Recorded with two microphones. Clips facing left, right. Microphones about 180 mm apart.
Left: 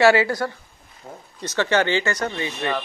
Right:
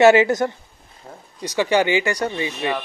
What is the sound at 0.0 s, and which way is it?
Speech, 20° right (ahead or behind).